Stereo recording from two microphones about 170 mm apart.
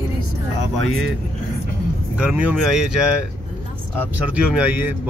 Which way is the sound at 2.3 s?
5° right (ahead or behind).